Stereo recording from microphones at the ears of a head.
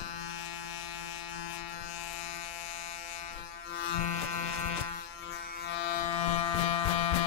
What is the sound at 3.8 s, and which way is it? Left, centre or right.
Electric shaver, left.